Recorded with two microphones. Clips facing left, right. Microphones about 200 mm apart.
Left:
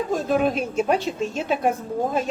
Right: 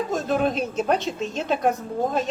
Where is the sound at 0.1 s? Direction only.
5° left (ahead or behind).